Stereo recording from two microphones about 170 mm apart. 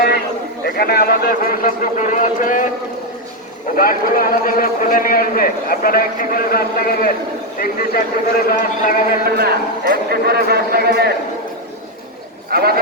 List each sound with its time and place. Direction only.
0.6 s a man's voice: 65° left (ahead or behind)
3.8 s a man's voice: 55° left (ahead or behind)
9.2 s a man's voice: 65° right (ahead or behind)
12.5 s a man's voice: 65° right (ahead or behind)